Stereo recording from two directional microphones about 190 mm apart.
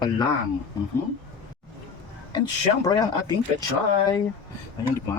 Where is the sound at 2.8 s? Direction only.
20° left (ahead or behind).